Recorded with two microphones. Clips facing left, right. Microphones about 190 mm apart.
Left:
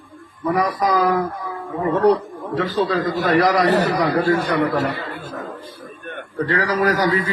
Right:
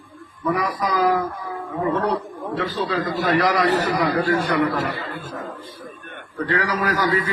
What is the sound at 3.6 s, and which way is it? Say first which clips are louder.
Speech: left 3 dB; 70° left (ahead or behind).